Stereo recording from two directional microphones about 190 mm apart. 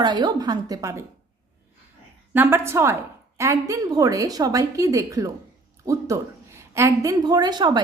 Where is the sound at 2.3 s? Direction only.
10° right (ahead or behind).